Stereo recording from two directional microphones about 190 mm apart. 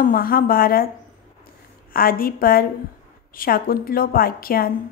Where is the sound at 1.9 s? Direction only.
50° left (ahead or behind).